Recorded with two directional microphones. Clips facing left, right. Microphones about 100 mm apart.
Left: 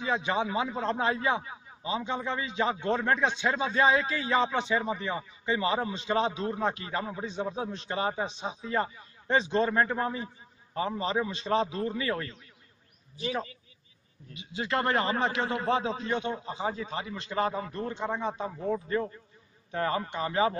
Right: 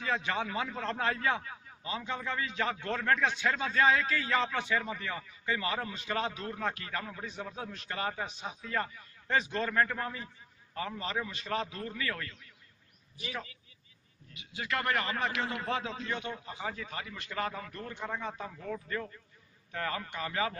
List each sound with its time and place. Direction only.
0.0 s a man's voice: 20° left (ahead or behind)